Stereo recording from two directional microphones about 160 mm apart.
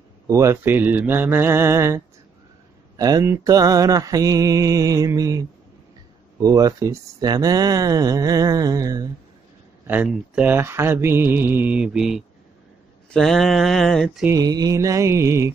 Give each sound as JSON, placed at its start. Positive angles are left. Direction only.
{"t": 0.3, "sound": "mantra", "side_deg": -20}
{"t": 3.0, "sound": "speech", "side_deg": -25}
{"t": 6.4, "sound": "speech", "side_deg": -20}
{"t": 9.8, "sound": "mantra", "side_deg": -10}
{"t": 14.2, "sound": "speech", "side_deg": -20}